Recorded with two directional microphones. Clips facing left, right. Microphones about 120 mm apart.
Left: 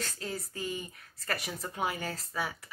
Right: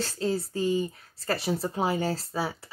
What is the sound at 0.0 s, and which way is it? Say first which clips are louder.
Speech: right 10 dB; 30° right (ahead or behind).